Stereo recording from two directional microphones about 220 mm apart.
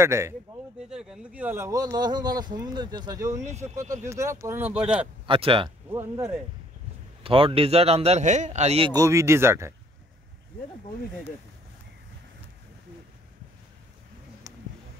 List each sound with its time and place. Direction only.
0.0 s speech: 10° right (ahead or behind)
5.2 s a man's voice: 25° right (ahead or behind)
5.9 s speech: 10° right (ahead or behind)
7.2 s a man's voice: 25° right (ahead or behind)
14.5 s a sound: 15° right (ahead or behind)